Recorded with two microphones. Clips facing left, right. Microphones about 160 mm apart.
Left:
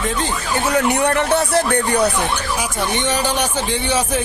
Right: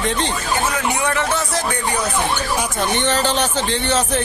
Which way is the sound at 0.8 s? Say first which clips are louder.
Left 4 dB; 60° left (ahead or behind).